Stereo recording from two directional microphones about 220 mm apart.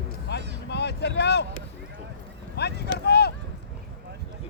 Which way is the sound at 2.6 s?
50° left (ahead or behind).